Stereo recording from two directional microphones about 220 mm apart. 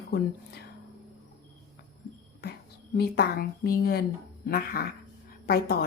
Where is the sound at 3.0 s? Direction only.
45° left (ahead or behind).